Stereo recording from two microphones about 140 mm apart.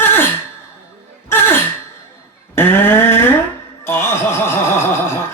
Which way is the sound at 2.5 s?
15° left (ahead or behind).